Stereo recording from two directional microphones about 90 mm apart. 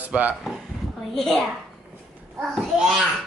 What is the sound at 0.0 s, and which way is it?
Speech, 15° right (ahead or behind).